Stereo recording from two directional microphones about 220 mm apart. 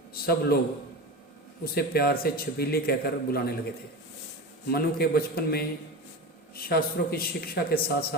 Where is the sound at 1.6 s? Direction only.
45° left (ahead or behind).